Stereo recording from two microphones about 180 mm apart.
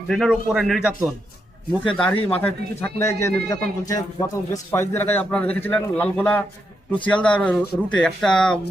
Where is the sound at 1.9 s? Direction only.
5° left (ahead or behind).